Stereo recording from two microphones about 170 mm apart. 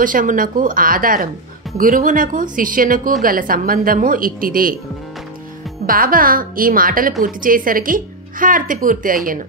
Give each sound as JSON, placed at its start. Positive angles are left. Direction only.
{"t": 0.0, "sound": "a woman's voice", "side_deg": -50}
{"t": 5.9, "sound": "a woman's voice", "side_deg": -55}